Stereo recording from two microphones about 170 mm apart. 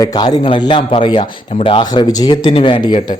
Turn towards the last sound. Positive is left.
turn(degrees=30)  # may be behind; listen again after turning